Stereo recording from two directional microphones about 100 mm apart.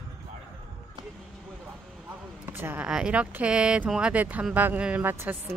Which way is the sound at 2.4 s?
20° right (ahead or behind).